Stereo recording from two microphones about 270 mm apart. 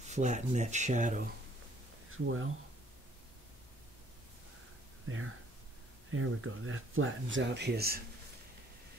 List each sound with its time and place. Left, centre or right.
0.0 s speech: right
2.0 s speech: right
5.0 s speech: right